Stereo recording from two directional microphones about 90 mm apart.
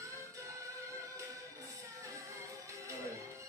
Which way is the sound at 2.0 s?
35° right (ahead or behind).